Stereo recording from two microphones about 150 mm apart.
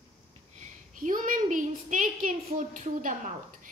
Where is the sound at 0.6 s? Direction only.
60° right (ahead or behind).